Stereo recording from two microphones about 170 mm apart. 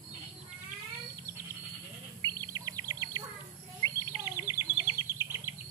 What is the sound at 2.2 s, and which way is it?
Bird, 20° right (ahead or behind).